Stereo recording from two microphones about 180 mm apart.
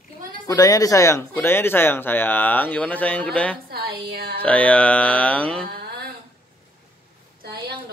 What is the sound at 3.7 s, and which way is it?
Speech, 60° right (ahead or behind).